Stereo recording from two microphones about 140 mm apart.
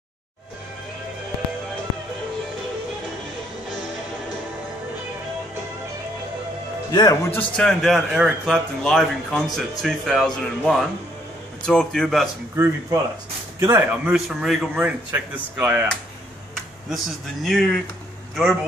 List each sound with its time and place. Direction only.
6.9 s speech: 30° left (ahead or behind)
7.2 s a man's voice: 10° left (ahead or behind)
13.6 s speech: 15° right (ahead or behind)
14.1 s speech: centre (ahead or behind)
16.9 s a man's voice: centre (ahead or behind)